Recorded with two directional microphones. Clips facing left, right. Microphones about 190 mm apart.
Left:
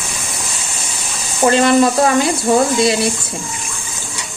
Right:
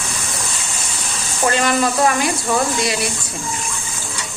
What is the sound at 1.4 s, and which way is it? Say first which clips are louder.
Speech: left 6 dB; 25° left (ahead or behind).